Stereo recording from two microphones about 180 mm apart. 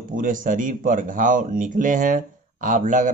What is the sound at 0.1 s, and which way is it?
A man's voice, 50° right (ahead or behind).